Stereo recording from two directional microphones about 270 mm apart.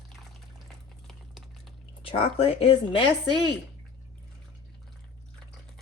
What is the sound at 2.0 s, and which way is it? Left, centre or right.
Speech, left.